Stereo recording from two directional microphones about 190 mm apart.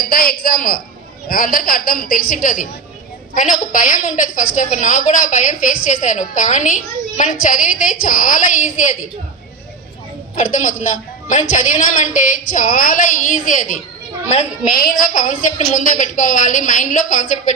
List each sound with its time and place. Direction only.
0.0 s a woman's voice: 50° left (ahead or behind)
10.3 s a woman's voice: 40° left (ahead or behind)